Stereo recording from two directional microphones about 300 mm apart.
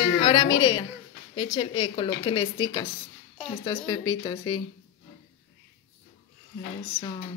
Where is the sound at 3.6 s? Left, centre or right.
Centre.